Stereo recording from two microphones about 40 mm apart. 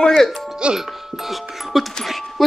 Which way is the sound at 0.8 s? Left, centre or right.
Centre.